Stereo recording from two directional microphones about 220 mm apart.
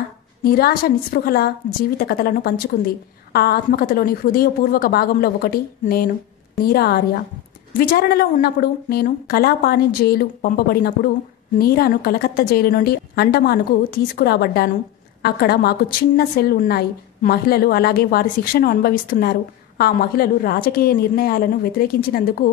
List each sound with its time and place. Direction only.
0.4 s a woman's voice: 45° left (ahead or behind)